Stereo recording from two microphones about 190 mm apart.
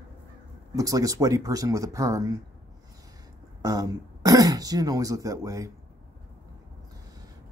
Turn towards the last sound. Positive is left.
turn(degrees=-15)  # may be behind; listen again after turning